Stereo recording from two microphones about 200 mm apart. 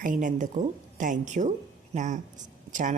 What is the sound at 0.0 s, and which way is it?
Speech, 40° right (ahead or behind).